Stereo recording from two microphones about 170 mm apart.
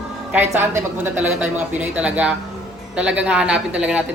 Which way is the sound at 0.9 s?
10° right (ahead or behind).